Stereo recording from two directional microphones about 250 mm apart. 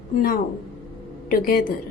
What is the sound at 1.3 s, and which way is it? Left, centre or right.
Speech, left.